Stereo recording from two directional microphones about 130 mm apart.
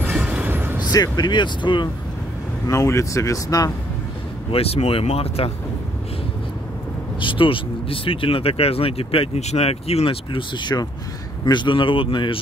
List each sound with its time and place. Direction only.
0.0 s a sound: 10° right (ahead or behind)
0.9 s speech: 30° left (ahead or behind)
2.6 s speech: 25° left (ahead or behind)
4.5 s speech: 50° left (ahead or behind)
7.2 s speech: 40° left (ahead or behind)